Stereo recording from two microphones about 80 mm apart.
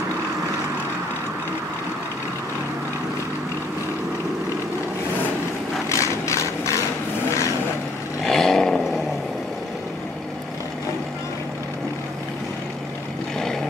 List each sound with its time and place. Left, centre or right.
5.9 s a sound: left
8.2 s vehicle: centre
13.4 s vehicle: centre